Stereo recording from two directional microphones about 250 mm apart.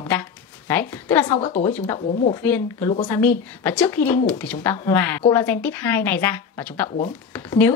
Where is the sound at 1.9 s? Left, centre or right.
Left.